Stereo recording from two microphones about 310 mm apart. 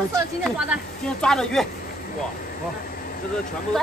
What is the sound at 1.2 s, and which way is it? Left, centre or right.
Speech, centre.